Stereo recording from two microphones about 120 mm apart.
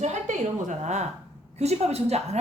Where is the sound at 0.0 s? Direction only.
80° right.